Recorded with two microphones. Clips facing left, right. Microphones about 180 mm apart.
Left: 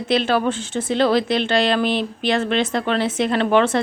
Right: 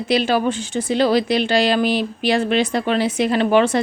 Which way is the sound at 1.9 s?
25° left (ahead or behind).